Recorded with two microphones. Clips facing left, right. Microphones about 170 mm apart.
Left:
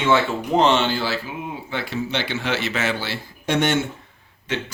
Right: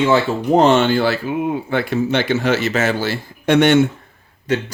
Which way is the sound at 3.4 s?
65° right (ahead or behind).